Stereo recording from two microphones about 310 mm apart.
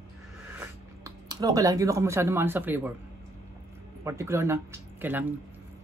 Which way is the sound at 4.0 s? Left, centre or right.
Centre.